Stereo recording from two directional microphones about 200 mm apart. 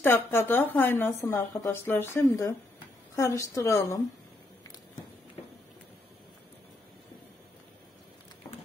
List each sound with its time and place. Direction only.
0.0 s a woman's voice: 10° left (ahead or behind)